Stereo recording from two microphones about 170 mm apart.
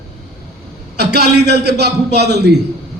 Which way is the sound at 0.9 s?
75° right (ahead or behind).